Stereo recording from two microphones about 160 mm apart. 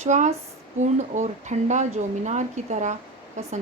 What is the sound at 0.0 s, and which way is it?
Speech, 45° right (ahead or behind).